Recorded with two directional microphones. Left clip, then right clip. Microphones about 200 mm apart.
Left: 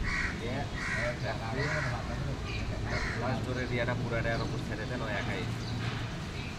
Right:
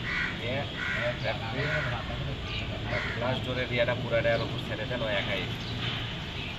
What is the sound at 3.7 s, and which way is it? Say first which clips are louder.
Vehicle: right 7 dB; 25° right (ahead or behind).